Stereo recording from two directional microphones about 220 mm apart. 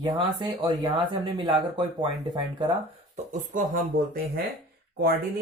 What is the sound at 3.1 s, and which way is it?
Speech, 35° right (ahead or behind).